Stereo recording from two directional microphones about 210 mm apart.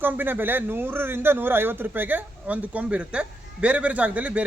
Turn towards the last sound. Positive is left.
turn(degrees=-5)  # may be behind; listen again after turning